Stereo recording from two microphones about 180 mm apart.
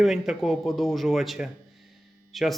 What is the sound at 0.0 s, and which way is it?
Speech, centre (ahead or behind).